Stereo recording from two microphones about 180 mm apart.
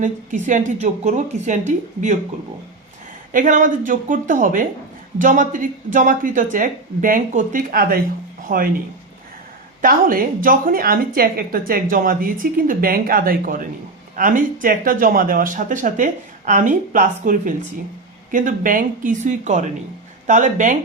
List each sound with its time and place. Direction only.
0.0 s a woman's voice: 45° right (ahead or behind)
3.3 s a woman's voice: 45° right (ahead or behind)
9.8 s a woman's voice: 50° right (ahead or behind)